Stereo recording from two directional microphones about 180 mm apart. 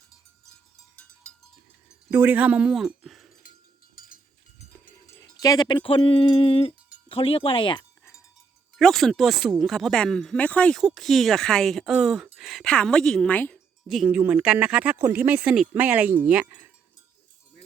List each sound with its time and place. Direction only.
2.0 s speech: 10° right (ahead or behind)
4.0 s cowbell: 55° left (ahead or behind)
5.0 s speech: 20° left (ahead or behind)
8.8 s speech: centre (ahead or behind)
13.8 s speech: 5° right (ahead or behind)